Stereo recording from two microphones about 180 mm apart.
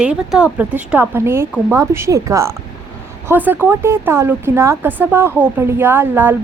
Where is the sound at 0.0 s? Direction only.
5° right (ahead or behind).